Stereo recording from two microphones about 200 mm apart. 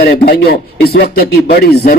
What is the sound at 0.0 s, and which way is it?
A man's voice, 50° left (ahead or behind).